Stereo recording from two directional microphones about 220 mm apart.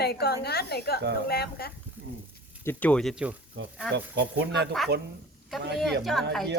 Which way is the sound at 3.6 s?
55° right (ahead or behind).